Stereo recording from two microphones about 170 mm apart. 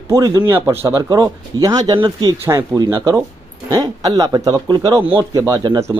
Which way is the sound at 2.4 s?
15° right (ahead or behind).